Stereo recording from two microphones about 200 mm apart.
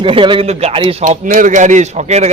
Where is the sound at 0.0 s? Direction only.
25° right (ahead or behind).